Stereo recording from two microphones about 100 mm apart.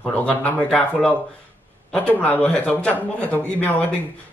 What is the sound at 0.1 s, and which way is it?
A man's voice, 15° left (ahead or behind).